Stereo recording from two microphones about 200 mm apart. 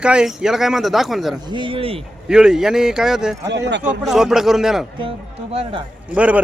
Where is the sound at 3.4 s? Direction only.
60° right (ahead or behind).